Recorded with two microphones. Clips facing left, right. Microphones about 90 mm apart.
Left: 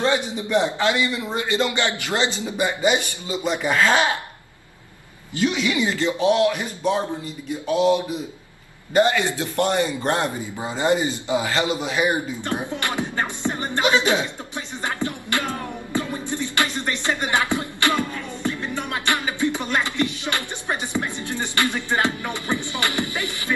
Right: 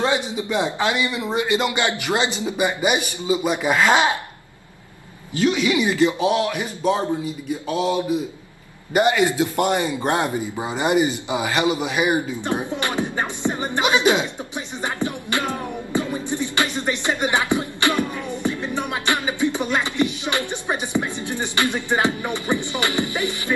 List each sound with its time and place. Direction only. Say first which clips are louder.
0.0 s a man's voice: even; 15° right (ahead or behind)
5.6 s a man's voice: right 4 dB; 15° right (ahead or behind)
6.5 s a man's voice: right 2 dB; 15° right (ahead or behind)
8.9 s a man's voice: right 1 dB; 15° right (ahead or behind)
14.8 s music: right 1 dB; 15° right (ahead or behind)